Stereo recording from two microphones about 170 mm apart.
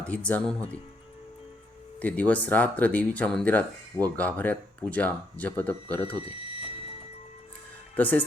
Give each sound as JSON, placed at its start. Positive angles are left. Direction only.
{"t": 0.0, "sound": "speech", "side_deg": 5}
{"t": 2.0, "sound": "speech", "side_deg": 10}
{"t": 6.1, "sound": "speech", "side_deg": 35}
{"t": 7.9, "sound": "speech", "side_deg": 10}